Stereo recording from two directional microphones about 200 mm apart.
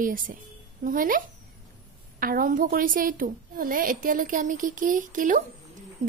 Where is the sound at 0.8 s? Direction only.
45° right (ahead or behind).